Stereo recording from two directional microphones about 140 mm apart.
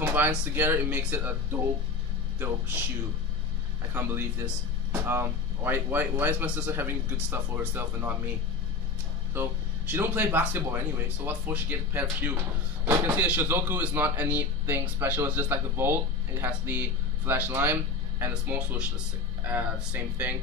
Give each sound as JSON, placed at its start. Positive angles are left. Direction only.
{"t": 0.0, "sound": "speech", "side_deg": -15}
{"t": 2.3, "sound": "speech", "side_deg": -15}
{"t": 3.9, "sound": "speech", "side_deg": -15}
{"t": 9.3, "sound": "speech", "side_deg": -15}